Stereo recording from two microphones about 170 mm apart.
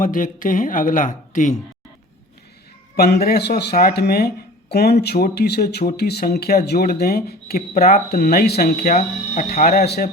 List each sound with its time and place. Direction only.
0.0 s speech: 50° left (ahead or behind)
2.9 s speech: 65° left (ahead or behind)
9.0 s speech: 45° left (ahead or behind)
9.6 s speech: 60° left (ahead or behind)